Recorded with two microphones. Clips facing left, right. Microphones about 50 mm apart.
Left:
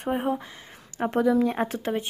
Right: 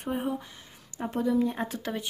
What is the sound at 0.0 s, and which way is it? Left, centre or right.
Speech, left.